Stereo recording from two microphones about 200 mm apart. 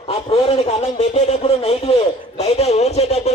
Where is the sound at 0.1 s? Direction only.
30° left (ahead or behind).